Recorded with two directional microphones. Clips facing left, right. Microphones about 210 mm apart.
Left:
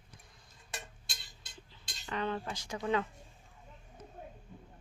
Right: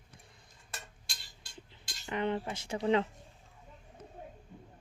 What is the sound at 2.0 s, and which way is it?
Speech, 20° right (ahead or behind).